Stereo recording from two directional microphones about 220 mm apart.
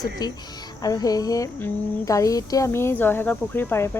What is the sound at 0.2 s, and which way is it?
Speech, 15° left (ahead or behind).